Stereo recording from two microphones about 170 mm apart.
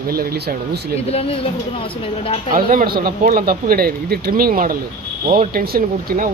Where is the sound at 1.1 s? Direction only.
35° left (ahead or behind).